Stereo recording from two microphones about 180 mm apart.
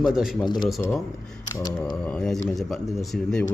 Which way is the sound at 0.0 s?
Centre (ahead or behind).